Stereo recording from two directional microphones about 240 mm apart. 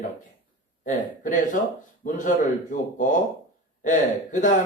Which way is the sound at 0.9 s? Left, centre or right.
Left.